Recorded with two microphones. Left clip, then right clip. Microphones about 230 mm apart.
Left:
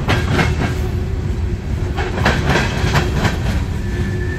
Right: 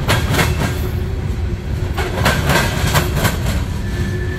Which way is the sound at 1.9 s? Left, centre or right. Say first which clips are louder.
Right 1 dB; right.